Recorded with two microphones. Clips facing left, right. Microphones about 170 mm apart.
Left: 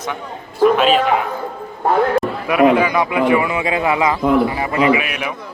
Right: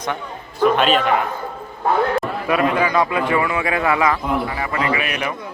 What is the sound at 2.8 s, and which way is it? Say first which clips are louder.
A man's voice: left 2 dB; 15° left (ahead or behind).